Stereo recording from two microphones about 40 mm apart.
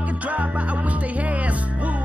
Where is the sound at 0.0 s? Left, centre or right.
Right.